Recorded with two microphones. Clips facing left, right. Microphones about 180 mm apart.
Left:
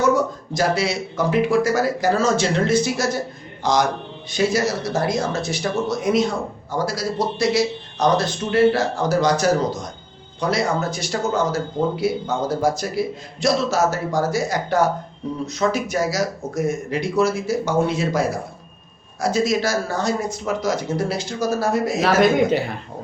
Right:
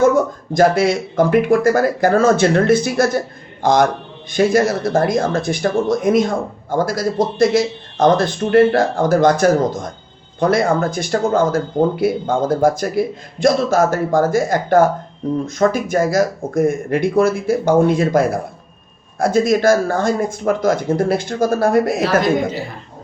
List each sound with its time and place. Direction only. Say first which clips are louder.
0.5 s speech: right 8 dB; 50° right (ahead or behind)
22.2 s a woman's voice: left 2 dB; 65° left (ahead or behind)